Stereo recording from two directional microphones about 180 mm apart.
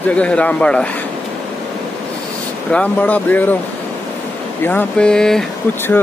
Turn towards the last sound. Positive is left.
turn(degrees=5)  # may be behind; listen again after turning